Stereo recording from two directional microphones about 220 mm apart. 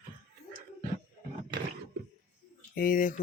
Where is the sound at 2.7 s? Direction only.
40° left (ahead or behind).